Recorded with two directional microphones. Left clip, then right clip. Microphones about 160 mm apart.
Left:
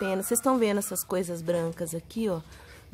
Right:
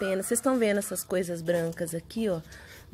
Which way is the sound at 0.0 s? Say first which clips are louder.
Even; 5° left (ahead or behind).